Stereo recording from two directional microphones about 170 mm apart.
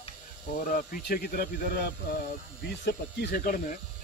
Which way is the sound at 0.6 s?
55° left (ahead or behind).